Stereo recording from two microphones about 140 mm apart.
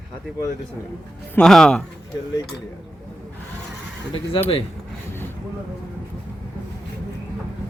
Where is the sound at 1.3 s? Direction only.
5° left (ahead or behind).